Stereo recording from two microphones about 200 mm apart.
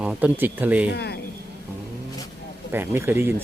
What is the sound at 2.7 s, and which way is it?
Speech, 10° right (ahead or behind).